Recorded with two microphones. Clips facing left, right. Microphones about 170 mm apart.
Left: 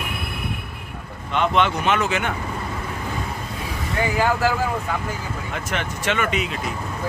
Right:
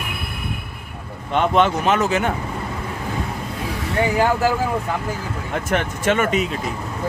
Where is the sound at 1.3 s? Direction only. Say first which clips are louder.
Right 3 dB; 45° right (ahead or behind).